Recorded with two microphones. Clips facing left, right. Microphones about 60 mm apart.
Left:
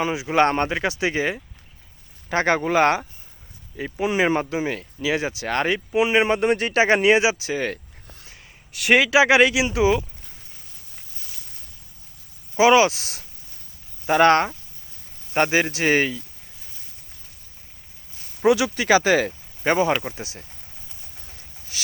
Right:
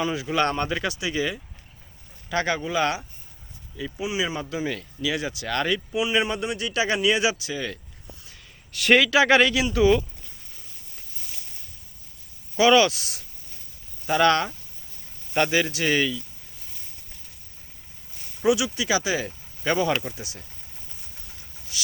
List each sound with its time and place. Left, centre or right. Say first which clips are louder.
0.0 s speech: left 4 dB; left
4.5 s speech: left 3 dB; left
7.5 s speech: left 5 dB; left
8.7 s speech: even; centre
9.0 s speech: left 4 dB; centre
12.5 s speech: left 2 dB; left
13.0 s speech: left 1 dB; left
18.4 s speech: left 4 dB; left
19.6 s speech: left 3 dB; left